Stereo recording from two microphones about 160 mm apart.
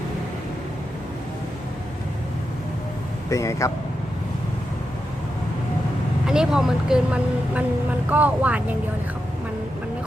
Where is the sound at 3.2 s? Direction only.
20° left (ahead or behind).